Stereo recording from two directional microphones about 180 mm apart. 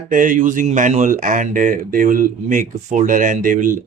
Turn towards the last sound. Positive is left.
turn(degrees=-50)  # may be behind; listen again after turning